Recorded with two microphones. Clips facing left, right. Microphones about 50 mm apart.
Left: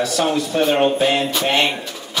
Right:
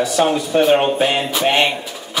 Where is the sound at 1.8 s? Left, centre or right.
Centre.